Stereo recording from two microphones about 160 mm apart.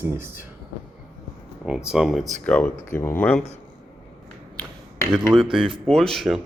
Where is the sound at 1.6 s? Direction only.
5° right (ahead or behind).